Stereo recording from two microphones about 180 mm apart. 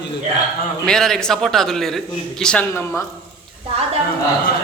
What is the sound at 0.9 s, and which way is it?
A man's voice, 5° left (ahead or behind).